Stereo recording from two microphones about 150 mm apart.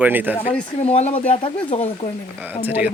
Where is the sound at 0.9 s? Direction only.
45° left (ahead or behind).